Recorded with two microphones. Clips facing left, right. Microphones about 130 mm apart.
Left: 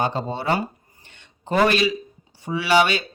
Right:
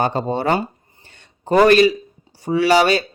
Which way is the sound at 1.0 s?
40° right (ahead or behind).